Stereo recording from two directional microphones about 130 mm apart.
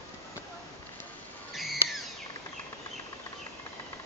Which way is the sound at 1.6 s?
Centre (ahead or behind).